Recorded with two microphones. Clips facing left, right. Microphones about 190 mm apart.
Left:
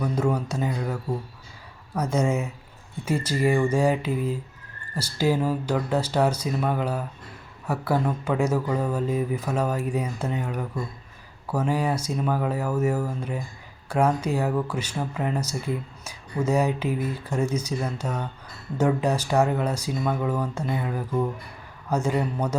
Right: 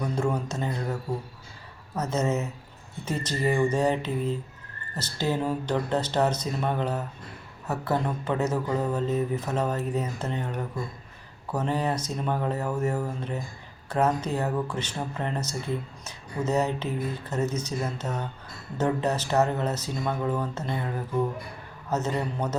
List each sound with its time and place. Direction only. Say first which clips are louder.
0.0 s speech: left 3 dB; 5° left (ahead or behind)
2.0 s speech: left 2 dB; 10° left (ahead or behind)